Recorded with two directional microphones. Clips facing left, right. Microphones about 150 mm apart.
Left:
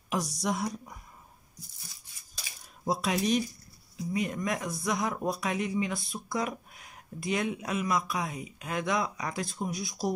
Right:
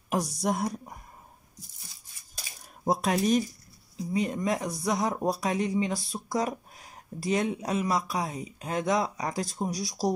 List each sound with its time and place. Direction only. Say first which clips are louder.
0.4 s speech: right 3 dB; 50° right (ahead or behind)
2.3 s a sound: right 2 dB; 50° right (ahead or behind)
4.1 s speech: right 3 dB; 30° right (ahead or behind)